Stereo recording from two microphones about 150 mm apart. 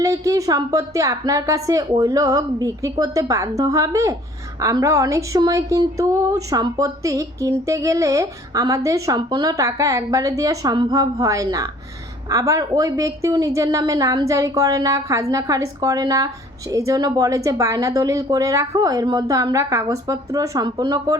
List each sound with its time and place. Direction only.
0.0 s a woman's voice: 20° right (ahead or behind)